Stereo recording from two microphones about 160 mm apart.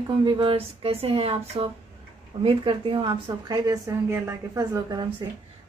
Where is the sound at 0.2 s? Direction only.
30° right (ahead or behind).